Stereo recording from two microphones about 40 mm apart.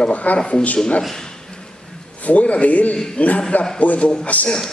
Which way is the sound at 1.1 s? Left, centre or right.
Centre.